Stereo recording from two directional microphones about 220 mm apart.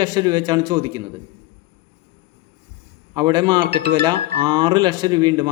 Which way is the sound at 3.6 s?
45° right (ahead or behind).